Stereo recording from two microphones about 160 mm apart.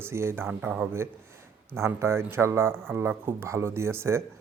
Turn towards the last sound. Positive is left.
turn(degrees=-15)  # may be behind; listen again after turning